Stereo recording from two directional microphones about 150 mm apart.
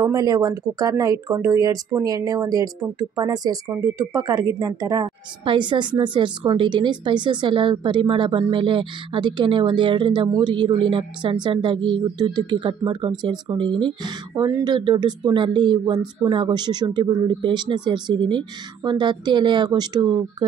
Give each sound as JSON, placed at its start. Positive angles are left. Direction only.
{"t": 0.0, "sound": "a woman's voice", "side_deg": -25}